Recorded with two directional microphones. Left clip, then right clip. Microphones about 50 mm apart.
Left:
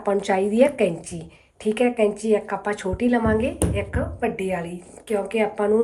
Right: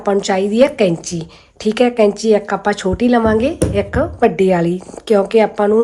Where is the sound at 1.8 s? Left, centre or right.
Right.